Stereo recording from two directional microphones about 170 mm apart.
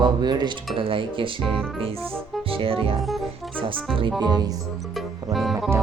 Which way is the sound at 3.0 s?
Centre (ahead or behind).